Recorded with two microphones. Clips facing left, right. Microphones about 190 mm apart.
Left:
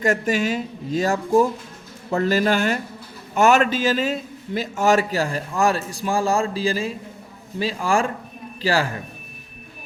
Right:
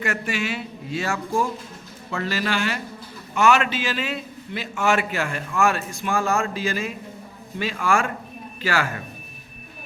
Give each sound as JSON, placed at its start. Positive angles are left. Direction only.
{"t": 0.0, "sound": "a man's voice", "side_deg": 40}